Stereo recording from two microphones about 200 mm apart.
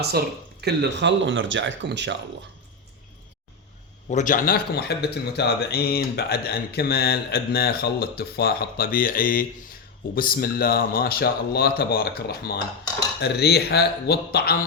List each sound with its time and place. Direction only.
0.0 s speech: 55° right (ahead or behind)
4.1 s speech: 40° left (ahead or behind)